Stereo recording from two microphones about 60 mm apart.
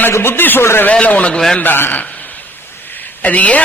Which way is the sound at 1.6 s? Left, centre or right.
Left.